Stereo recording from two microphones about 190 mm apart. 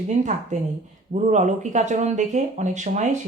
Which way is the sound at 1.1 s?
40° right (ahead or behind).